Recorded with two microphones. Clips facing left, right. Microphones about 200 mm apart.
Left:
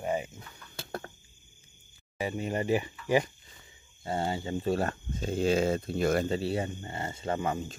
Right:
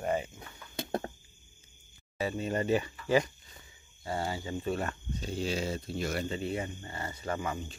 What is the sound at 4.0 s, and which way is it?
Speech, 25° left (ahead or behind).